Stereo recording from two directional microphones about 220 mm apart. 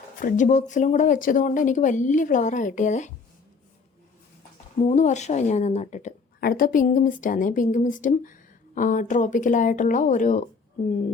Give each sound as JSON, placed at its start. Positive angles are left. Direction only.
{"t": 0.2, "sound": "a woman's voice", "side_deg": 35}
{"t": 4.9, "sound": "a woman's voice", "side_deg": 35}